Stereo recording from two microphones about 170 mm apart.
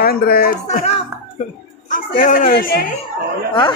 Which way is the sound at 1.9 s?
55° left (ahead or behind).